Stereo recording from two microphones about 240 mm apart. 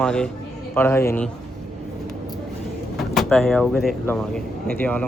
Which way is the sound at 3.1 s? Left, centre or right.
Centre.